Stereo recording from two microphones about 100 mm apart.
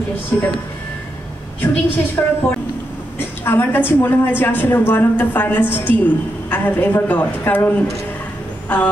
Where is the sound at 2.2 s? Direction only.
20° left (ahead or behind).